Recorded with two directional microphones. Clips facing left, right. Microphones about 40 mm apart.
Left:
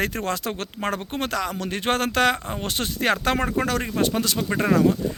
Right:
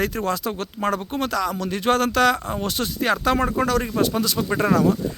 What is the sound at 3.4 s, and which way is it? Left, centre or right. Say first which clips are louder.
Speech: right 3 dB; left.